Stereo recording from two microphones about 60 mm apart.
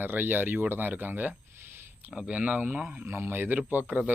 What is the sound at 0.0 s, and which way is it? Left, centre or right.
Speech, right.